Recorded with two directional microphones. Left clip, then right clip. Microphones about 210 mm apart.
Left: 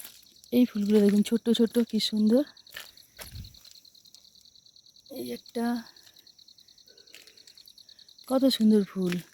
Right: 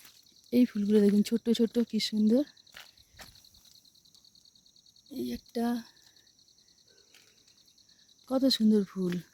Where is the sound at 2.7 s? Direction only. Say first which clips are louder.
Left 7 dB; 55° left (ahead or behind).